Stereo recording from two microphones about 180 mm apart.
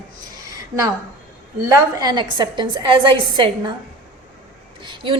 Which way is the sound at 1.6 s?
20° right (ahead or behind).